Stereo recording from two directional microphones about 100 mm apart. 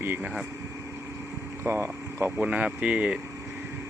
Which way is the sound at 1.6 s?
25° right (ahead or behind).